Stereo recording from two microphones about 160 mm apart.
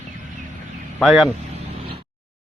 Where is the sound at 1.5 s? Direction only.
35° right (ahead or behind).